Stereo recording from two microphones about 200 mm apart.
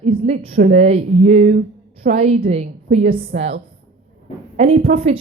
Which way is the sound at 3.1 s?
45° right (ahead or behind).